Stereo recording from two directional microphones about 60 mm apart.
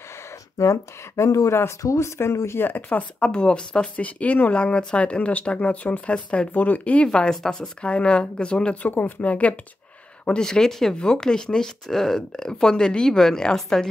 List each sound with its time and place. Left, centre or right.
0.6 s speech: left; by 13.8 s centre